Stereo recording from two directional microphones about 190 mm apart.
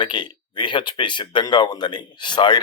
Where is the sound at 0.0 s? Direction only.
25° left (ahead or behind).